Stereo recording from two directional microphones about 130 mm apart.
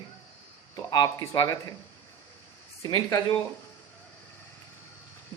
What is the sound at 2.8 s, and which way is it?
Speech, 30° left (ahead or behind).